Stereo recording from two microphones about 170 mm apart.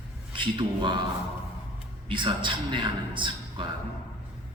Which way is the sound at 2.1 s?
30° right (ahead or behind).